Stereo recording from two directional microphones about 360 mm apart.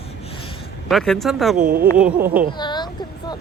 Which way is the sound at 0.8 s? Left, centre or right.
Centre.